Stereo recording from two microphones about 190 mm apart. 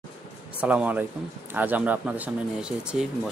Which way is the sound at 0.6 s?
5° right (ahead or behind).